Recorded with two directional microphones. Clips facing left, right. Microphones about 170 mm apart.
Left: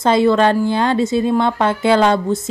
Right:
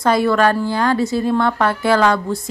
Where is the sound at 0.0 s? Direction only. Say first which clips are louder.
Left 2 dB; 25° left (ahead or behind).